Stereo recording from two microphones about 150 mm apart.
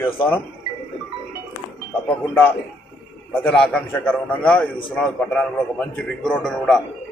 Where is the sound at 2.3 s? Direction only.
10° left (ahead or behind).